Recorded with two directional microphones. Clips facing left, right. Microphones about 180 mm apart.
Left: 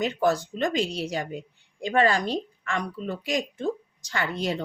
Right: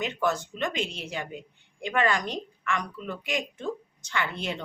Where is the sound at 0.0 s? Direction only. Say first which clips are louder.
Left 4 dB; 35° left (ahead or behind).